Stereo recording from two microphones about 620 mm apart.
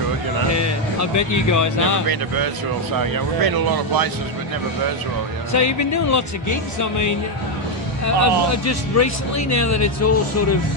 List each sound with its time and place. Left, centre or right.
0.5 s music: left
2.0 s speech: right
5.5 s speech: left